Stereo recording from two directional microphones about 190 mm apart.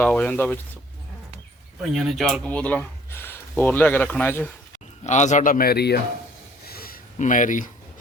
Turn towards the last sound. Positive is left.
turn(degrees=45)  # may be behind; listen again after turning